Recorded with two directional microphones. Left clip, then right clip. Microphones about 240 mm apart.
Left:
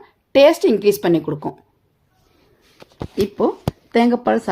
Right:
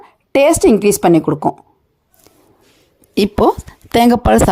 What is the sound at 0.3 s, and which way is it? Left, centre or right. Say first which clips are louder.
Speech: right 2 dB; right.